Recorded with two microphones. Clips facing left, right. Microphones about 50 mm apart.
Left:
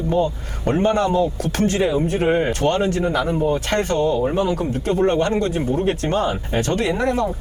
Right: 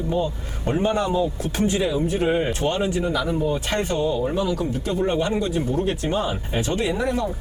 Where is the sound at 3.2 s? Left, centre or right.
Centre.